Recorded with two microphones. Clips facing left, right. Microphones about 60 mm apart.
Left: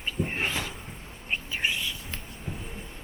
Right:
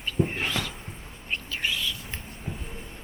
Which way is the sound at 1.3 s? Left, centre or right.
Centre.